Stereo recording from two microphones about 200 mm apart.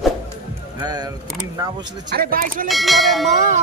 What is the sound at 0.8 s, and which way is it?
Speech, 20° right (ahead or behind).